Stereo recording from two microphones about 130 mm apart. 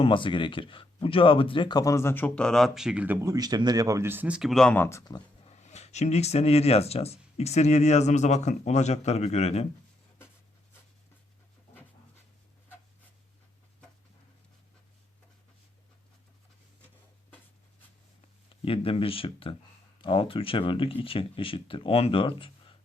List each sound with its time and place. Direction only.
0.0 s speech: 40° left (ahead or behind); by 3.2 s 10° right (ahead or behind)
3.2 s speech: 25° right (ahead or behind); by 4.7 s centre (ahead or behind)
4.7 s speech: 20° left (ahead or behind)
5.5 s speech: 60° left (ahead or behind)
18.4 s speech: 45° left (ahead or behind)